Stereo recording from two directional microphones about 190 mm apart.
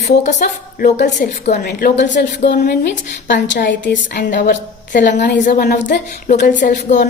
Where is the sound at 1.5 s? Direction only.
60° left (ahead or behind).